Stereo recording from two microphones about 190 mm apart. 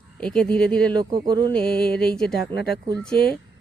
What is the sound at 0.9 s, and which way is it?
Speech, 25° right (ahead or behind).